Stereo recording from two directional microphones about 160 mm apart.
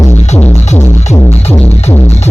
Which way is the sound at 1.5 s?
15° left (ahead or behind).